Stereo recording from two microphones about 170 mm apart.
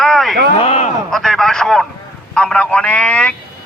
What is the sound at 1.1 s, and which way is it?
A man's voice, centre (ahead or behind).